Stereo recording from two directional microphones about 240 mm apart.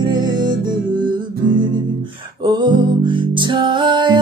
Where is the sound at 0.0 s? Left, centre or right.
Centre.